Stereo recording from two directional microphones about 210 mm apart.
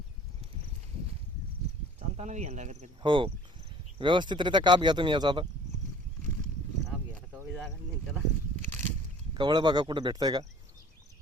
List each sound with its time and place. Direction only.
2.0 s speech: 30° right (ahead or behind)
3.0 s speech: 25° right (ahead or behind)
9.3 s speech: 20° right (ahead or behind)